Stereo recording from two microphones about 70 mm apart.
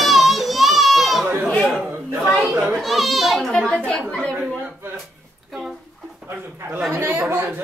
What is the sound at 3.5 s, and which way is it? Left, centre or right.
Speech, centre.